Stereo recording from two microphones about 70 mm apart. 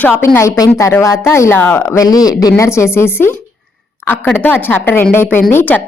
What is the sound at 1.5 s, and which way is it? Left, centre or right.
Speech, left.